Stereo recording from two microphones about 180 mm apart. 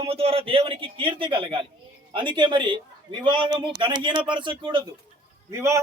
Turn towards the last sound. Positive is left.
turn(degrees=-15)  # may be behind; listen again after turning